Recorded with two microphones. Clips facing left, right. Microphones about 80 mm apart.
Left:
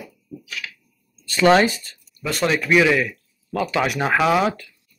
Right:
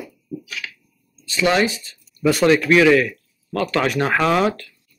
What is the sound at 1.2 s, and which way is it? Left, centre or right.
Speech, left.